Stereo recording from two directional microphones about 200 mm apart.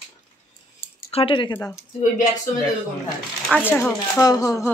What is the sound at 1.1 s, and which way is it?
Speech, 25° left (ahead or behind).